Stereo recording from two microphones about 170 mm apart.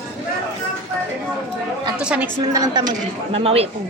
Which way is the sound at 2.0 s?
5° right (ahead or behind).